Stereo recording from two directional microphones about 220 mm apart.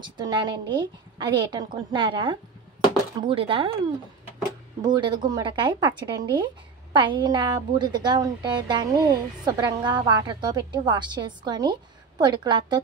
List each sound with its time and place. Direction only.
0.0 s speech: 20° right (ahead or behind)
4.8 s speech: 20° right (ahead or behind)